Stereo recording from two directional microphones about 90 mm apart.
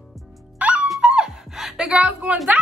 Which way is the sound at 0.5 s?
15° right (ahead or behind).